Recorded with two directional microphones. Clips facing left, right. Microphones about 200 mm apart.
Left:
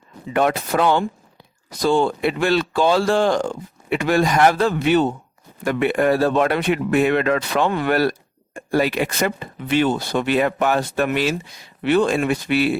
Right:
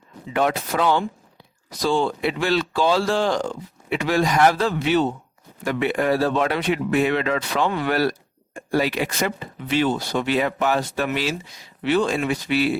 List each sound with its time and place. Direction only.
0.3 s speech: 55° left (ahead or behind)